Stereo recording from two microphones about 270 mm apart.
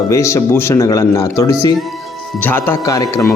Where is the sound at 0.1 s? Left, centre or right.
Centre.